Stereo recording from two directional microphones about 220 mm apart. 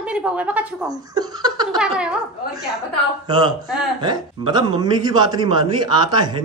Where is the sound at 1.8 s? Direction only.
5° right (ahead or behind).